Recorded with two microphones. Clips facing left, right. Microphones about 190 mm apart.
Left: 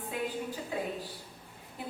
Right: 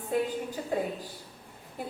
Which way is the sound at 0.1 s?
45° right (ahead or behind).